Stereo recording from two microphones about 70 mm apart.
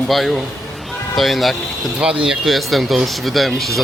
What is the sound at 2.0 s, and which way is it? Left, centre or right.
Speech, centre.